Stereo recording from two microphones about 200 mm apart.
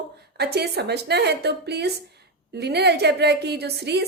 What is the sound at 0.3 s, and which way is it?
A woman's voice, 55° right (ahead or behind).